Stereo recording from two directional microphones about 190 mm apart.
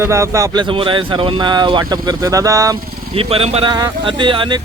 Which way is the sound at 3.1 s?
30° right (ahead or behind).